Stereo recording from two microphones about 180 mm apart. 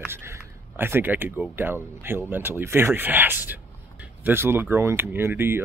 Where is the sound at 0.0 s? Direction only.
15° right (ahead or behind).